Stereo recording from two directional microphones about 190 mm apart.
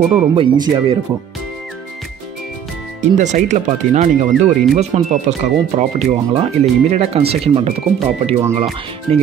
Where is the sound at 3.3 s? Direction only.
40° right (ahead or behind).